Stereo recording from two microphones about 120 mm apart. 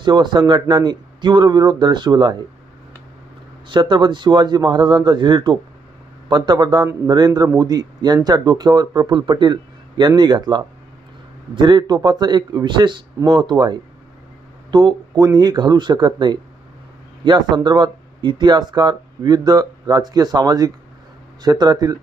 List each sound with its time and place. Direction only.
0.0 s speech: 40° right (ahead or behind)
3.7 s speech: 40° right (ahead or behind)